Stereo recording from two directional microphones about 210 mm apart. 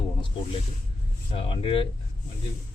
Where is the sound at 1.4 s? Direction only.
25° left (ahead or behind).